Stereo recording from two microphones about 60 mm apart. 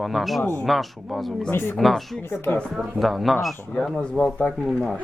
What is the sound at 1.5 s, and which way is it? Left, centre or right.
Speech, left.